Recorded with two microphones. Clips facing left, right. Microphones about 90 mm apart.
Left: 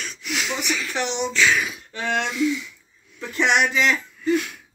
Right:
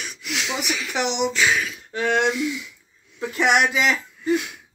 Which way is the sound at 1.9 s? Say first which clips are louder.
Right 3 dB; 15° right (ahead or behind).